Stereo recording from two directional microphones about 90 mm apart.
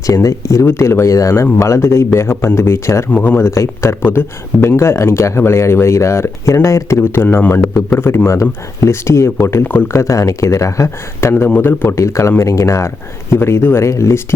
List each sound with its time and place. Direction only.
0.1 s speech: 40° left (ahead or behind)
3.1 s speech: 20° left (ahead or behind)